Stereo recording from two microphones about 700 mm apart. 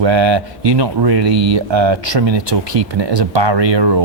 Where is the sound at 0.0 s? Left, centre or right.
Right.